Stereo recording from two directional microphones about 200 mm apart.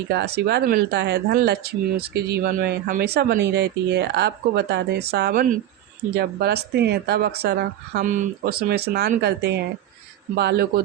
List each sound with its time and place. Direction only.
0.1 s speech: 55° right (ahead or behind)